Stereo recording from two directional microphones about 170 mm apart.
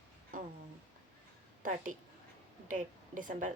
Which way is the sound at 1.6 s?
50° right (ahead or behind).